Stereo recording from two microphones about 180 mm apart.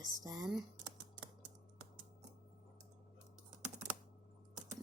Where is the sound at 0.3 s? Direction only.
20° right (ahead or behind).